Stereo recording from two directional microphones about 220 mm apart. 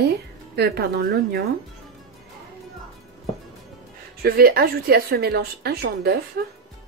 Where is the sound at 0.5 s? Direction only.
45° right (ahead or behind).